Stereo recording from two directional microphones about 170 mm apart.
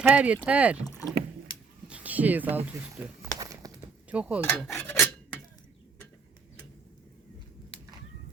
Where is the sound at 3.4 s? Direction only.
20° right (ahead or behind).